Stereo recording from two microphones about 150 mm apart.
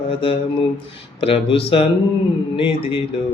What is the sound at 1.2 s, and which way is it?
Mantra, 35° left (ahead or behind).